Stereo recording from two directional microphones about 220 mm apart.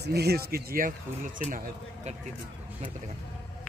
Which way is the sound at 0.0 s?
50° right (ahead or behind).